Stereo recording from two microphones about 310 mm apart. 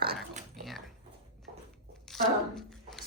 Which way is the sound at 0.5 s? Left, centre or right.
Centre.